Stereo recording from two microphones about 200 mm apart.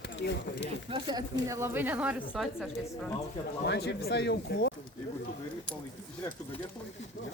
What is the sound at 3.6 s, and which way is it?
Speech, 55° left (ahead or behind).